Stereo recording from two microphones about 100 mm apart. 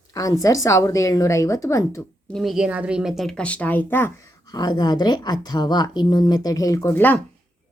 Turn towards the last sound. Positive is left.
turn(degrees=20)  # may be behind; listen again after turning